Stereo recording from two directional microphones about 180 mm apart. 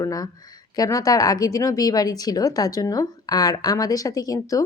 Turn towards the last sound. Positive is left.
turn(degrees=20)  # may be behind; listen again after turning